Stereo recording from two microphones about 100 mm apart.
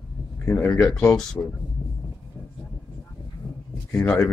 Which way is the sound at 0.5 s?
15° left (ahead or behind).